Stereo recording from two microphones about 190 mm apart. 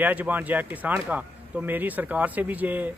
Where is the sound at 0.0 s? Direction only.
10° right (ahead or behind).